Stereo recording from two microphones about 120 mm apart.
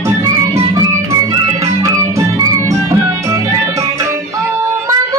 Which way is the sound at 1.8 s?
25° right (ahead or behind).